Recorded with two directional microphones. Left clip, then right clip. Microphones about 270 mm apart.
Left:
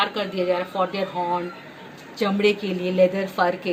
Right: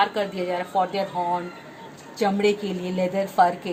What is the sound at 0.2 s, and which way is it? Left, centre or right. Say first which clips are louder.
Speech: left 2 dB; centre.